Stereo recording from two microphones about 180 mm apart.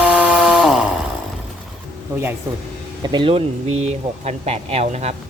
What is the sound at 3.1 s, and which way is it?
Speech, 30° right (ahead or behind).